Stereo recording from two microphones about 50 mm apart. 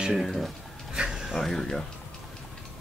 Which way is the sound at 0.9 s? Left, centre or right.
Centre.